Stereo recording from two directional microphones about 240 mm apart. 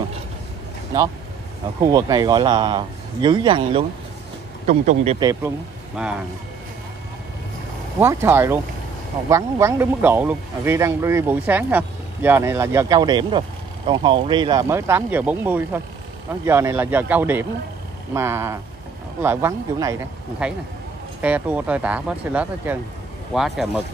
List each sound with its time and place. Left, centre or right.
1.8 s a man's voice: centre
6.0 s speech: centre
8.0 s speech: centre